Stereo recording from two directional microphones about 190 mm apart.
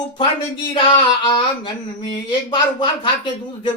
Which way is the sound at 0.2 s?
25° left (ahead or behind).